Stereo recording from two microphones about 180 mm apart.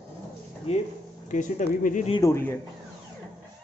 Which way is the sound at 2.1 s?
20° left (ahead or behind).